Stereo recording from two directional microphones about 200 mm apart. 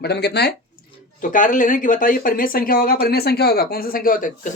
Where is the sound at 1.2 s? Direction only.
40° left (ahead or behind).